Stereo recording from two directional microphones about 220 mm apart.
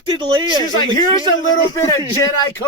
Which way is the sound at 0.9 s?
15° left (ahead or behind).